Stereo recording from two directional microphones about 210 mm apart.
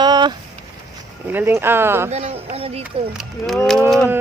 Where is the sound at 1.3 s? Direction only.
10° right (ahead or behind).